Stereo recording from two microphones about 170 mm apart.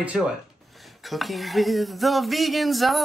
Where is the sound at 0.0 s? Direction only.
5° right (ahead or behind).